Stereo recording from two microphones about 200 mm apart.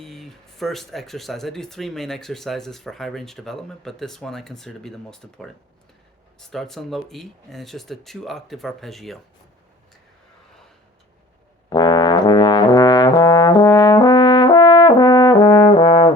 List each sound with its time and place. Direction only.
0.0 s speech: centre (ahead or behind)
11.7 s trombone: 20° left (ahead or behind)